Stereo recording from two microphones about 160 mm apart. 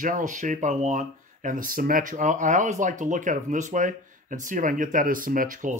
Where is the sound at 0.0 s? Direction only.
55° right (ahead or behind).